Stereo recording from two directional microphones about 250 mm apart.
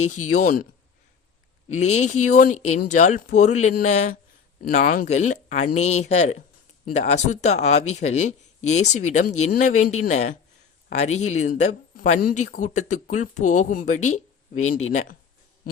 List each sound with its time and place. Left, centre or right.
0.0 s speech: left
1.7 s speech: left